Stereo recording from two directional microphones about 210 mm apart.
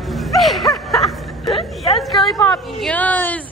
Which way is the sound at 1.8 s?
Centre (ahead or behind).